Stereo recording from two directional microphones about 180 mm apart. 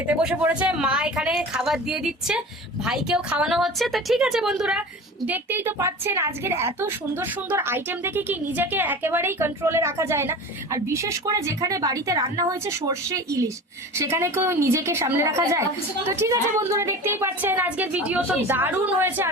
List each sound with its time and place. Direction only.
0.1 s a woman's voice: 5° right (ahead or behind)